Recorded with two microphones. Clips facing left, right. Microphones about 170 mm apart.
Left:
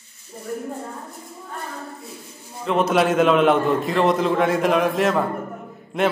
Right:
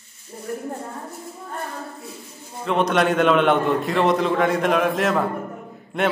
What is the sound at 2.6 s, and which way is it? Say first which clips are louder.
A man's voice: left 1 dB; centre (ahead or behind).